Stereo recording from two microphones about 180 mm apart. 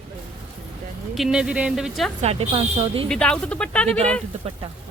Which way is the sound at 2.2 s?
35° right (ahead or behind).